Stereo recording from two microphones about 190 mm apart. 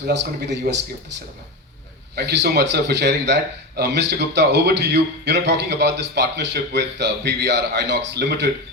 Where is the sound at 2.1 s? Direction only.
65° right (ahead or behind).